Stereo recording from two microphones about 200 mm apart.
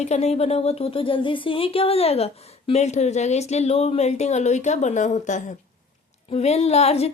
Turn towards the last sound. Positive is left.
turn(degrees=30)  # may be behind; listen again after turning